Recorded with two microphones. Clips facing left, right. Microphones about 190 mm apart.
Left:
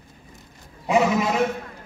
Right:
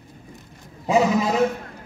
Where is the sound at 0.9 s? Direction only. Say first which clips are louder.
Right 1 dB; 35° right (ahead or behind).